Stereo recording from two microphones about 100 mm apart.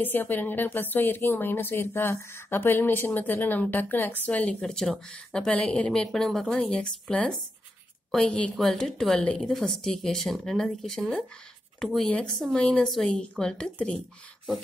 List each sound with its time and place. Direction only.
0.0 s a woman's voice: 20° left (ahead or behind)